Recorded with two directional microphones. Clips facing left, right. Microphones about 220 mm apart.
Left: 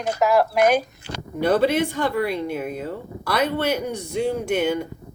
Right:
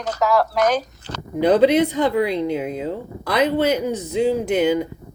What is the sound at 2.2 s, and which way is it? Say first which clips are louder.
Speech: right 4 dB; 90° right.